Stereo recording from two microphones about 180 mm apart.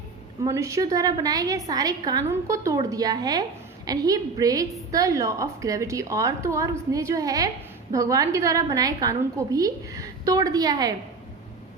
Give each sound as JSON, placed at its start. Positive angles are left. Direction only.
{"t": 0.4, "sound": "a woman's voice", "side_deg": -15}